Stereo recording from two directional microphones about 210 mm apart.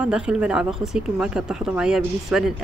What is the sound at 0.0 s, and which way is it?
Speech, 5° right (ahead or behind).